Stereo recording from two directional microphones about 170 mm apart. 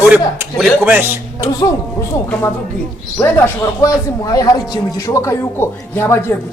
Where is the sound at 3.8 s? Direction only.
20° left (ahead or behind).